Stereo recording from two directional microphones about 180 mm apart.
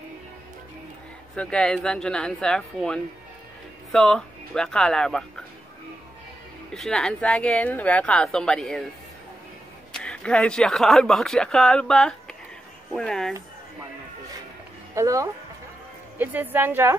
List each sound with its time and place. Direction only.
1.3 s speech: 5° left (ahead or behind)
6.7 s speech: 5° left (ahead or behind)
9.9 s speech: 5° left (ahead or behind)
15.0 s a woman's voice: 15° right (ahead or behind)